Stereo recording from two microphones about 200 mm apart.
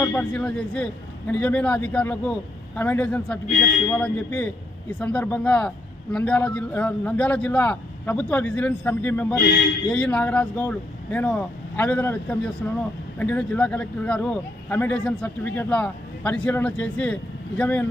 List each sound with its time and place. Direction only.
0.0 s a man's voice: 10° left (ahead or behind)